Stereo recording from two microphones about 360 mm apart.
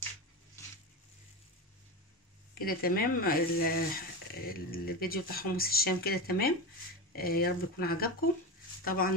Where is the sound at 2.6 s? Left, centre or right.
Left.